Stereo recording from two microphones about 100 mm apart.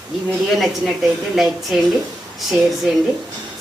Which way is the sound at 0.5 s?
Centre (ahead or behind).